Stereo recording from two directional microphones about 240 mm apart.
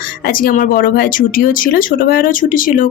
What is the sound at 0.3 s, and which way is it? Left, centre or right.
Speech, left.